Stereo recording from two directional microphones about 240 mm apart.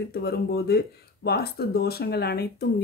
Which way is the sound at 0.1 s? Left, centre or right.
Left.